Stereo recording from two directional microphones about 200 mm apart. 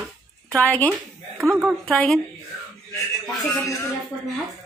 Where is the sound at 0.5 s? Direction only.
10° left (ahead or behind).